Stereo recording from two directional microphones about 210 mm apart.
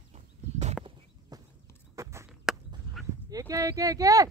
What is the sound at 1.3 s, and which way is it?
Horse, 15° right (ahead or behind).